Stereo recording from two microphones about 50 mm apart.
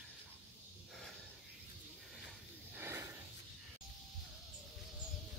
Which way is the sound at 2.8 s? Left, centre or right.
Right.